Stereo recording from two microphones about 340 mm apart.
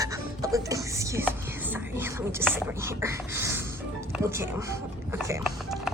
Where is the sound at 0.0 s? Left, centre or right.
Centre.